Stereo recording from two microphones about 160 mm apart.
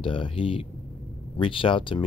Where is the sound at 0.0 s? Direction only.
30° left (ahead or behind).